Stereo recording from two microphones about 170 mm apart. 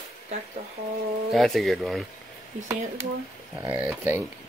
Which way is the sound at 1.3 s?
Centre (ahead or behind).